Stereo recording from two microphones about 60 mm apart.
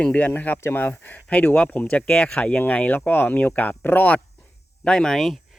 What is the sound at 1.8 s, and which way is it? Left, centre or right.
Speech, centre.